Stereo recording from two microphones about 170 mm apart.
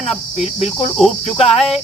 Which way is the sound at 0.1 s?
35° left (ahead or behind).